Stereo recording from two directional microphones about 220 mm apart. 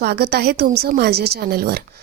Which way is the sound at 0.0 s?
45° right (ahead or behind).